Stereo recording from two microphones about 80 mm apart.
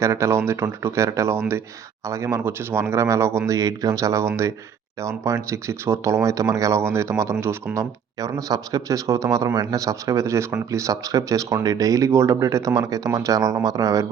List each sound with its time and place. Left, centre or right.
0.0 s speech: right
2.4 s speech: right